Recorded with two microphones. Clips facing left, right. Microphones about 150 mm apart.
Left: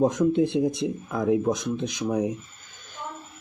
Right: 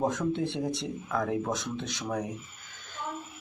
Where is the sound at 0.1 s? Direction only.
15° left (ahead or behind).